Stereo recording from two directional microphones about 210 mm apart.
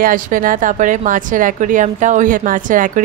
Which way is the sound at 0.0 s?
40° right (ahead or behind).